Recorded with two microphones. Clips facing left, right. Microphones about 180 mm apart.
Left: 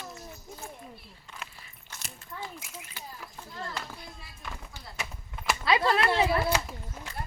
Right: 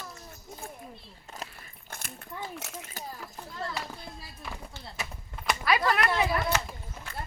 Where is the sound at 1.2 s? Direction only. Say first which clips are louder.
Right 4 dB; 40° right (ahead or behind).